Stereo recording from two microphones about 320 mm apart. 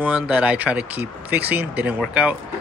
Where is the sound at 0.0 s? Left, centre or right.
Centre.